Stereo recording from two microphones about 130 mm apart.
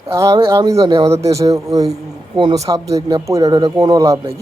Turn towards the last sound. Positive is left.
turn(degrees=-25)  # may be behind; listen again after turning